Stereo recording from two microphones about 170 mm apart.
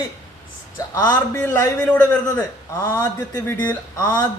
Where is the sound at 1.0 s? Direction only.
15° left (ahead or behind).